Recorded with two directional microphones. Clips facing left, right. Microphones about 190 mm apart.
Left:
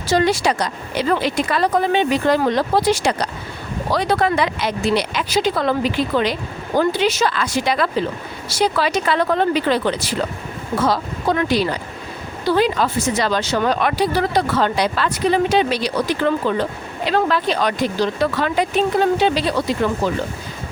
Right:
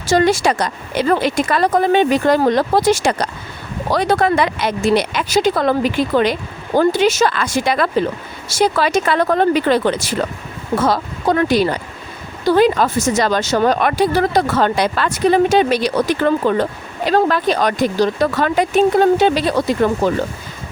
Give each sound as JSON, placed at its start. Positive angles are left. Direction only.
{"t": 0.1, "sound": "speech", "side_deg": -45}